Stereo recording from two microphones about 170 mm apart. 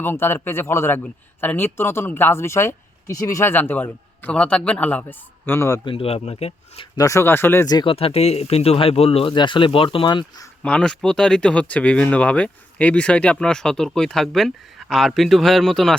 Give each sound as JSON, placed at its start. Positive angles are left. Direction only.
{"t": 0.0, "sound": "a man's voice", "side_deg": 15}
{"t": 5.8, "sound": "speech", "side_deg": 30}
{"t": 6.9, "sound": "speech", "side_deg": 20}
{"t": 10.6, "sound": "speech", "side_deg": 5}